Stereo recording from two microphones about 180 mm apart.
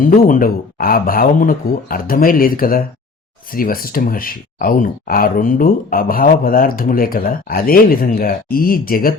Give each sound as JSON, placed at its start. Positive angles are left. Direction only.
{"t": 0.0, "sound": "speech", "side_deg": 50}